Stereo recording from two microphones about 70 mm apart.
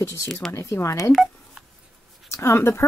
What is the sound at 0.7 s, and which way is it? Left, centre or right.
Speech, left.